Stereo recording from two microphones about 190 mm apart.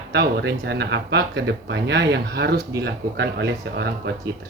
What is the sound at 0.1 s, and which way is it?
Speech, 65° right (ahead or behind).